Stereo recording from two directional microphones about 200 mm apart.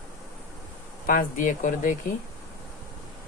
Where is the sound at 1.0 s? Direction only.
40° left (ahead or behind).